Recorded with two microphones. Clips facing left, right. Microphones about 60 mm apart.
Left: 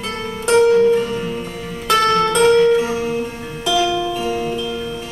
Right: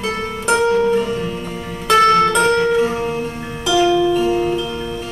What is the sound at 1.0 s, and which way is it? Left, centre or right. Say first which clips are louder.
Music: right 1 dB; centre.